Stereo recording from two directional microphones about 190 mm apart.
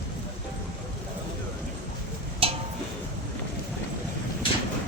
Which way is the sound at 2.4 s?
30° right (ahead or behind).